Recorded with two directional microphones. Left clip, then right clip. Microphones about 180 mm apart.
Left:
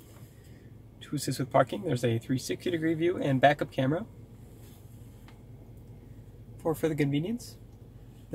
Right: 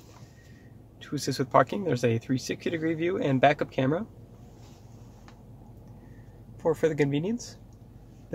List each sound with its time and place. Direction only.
1.0 s speech: 35° right (ahead or behind)
6.6 s speech: 35° right (ahead or behind)